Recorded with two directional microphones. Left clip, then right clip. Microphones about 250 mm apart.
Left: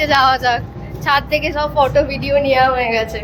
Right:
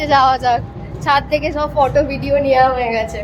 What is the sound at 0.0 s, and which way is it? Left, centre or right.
A woman's voice, centre.